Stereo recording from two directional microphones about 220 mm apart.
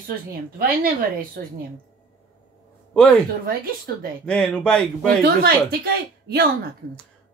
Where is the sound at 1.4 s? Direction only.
45° right (ahead or behind).